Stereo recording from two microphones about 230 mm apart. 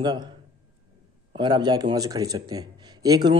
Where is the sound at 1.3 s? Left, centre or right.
Centre.